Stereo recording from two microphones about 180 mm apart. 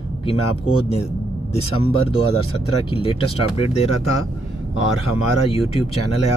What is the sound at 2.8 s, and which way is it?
Speech, 30° left (ahead or behind).